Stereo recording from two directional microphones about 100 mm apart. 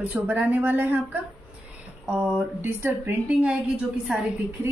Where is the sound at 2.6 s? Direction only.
25° right (ahead or behind).